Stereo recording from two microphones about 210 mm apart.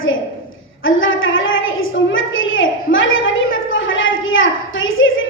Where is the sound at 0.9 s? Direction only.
70° left (ahead or behind).